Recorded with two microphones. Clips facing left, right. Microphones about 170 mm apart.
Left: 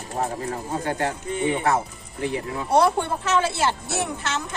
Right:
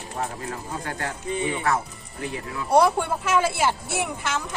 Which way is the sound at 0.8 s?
30° left (ahead or behind).